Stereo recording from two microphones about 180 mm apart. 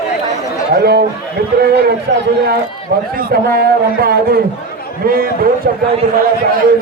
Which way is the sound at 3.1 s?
55° right (ahead or behind).